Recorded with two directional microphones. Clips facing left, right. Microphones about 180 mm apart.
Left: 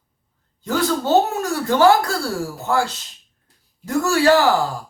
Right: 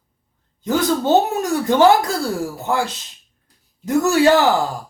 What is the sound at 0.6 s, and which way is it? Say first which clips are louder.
Speech: right 2 dB; 20° right (ahead or behind).